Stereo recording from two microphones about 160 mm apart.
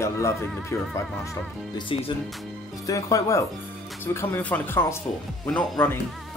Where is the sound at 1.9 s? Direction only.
35° left (ahead or behind).